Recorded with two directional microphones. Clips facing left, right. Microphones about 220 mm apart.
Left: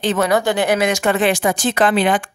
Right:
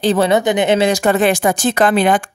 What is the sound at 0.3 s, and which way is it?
Speech, 20° right (ahead or behind).